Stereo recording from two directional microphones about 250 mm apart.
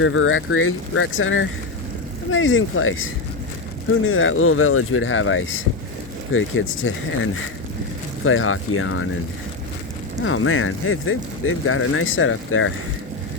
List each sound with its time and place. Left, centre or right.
0.0 s speech: left
4.0 s speech: left
10.2 s speech: left